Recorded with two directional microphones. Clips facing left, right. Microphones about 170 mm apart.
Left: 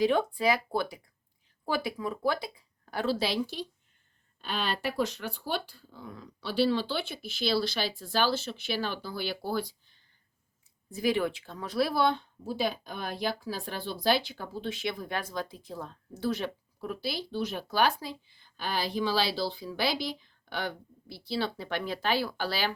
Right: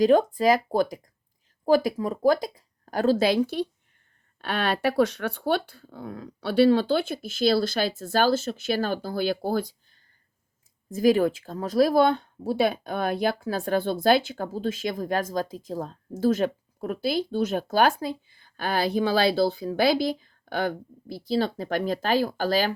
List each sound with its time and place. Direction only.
0.0 s speech: 40° right (ahead or behind)
10.9 s speech: 45° right (ahead or behind)